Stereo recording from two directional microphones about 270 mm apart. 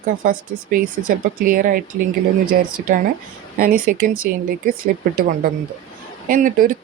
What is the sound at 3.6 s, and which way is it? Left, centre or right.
Speech, right.